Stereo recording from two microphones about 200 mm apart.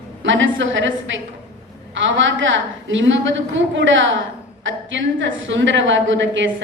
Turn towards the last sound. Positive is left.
turn(degrees=-70)  # may be behind; listen again after turning